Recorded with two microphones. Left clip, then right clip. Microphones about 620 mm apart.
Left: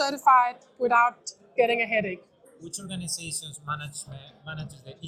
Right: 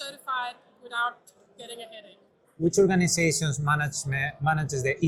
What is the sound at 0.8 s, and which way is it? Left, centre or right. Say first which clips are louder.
A woman's voice: left 9 dB; left.